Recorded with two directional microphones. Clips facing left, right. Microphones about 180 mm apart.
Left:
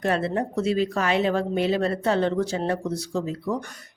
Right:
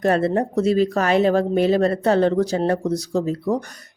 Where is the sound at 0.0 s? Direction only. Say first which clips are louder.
Right 6 dB; 40° right (ahead or behind).